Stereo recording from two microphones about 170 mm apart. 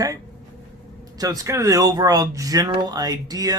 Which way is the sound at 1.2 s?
20° right (ahead or behind).